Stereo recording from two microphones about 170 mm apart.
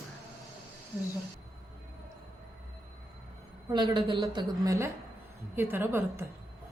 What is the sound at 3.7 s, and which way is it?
A woman's voice, 25° right (ahead or behind).